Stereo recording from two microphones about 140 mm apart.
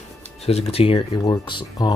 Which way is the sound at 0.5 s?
45° left (ahead or behind).